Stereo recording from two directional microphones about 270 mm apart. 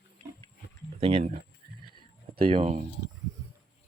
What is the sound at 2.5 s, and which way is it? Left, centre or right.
Speech, right.